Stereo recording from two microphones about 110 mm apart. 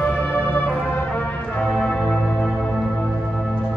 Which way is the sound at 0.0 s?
15° left (ahead or behind).